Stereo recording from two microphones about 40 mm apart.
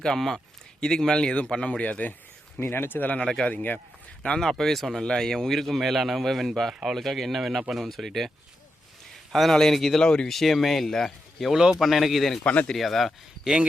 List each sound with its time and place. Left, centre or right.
0.0 s speech: centre; by 2.0 s left
2.6 s speech: left
3.0 s speech: left
4.4 s a man's voice: centre
9.3 s a man's voice: centre
10.0 s speech: left
10.2 s a man's voice: centre
11.8 s a man's voice: centre
12.4 s speech: left
12.7 s a man's voice: centre